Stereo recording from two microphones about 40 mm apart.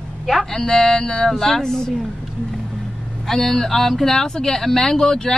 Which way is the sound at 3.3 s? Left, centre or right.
Centre.